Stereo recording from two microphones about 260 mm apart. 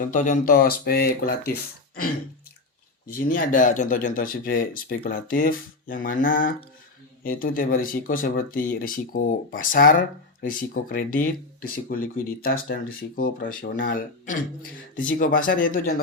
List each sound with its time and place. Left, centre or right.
0.0 s speech: left
3.2 s speech: left